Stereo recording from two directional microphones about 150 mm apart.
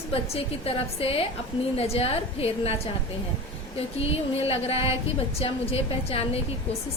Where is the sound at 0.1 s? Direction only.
40° left (ahead or behind).